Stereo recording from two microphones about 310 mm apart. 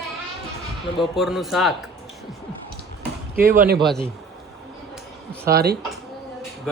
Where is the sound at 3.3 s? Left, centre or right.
Right.